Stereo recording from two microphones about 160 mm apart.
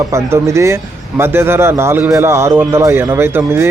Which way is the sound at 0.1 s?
20° right (ahead or behind).